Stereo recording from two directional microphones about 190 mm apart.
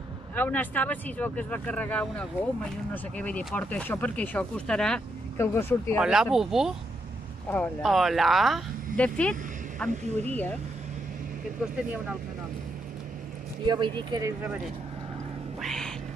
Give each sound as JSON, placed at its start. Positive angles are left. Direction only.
{"t": 0.4, "sound": "speech", "side_deg": 10}
{"t": 5.9, "sound": "speech", "side_deg": -5}
{"t": 7.4, "sound": "speech", "side_deg": 10}
{"t": 9.8, "sound": "speech", "side_deg": -35}
{"t": 10.3, "sound": "speech", "side_deg": 10}
{"t": 13.7, "sound": "speech", "side_deg": -25}
{"t": 15.6, "sound": "cat", "side_deg": 0}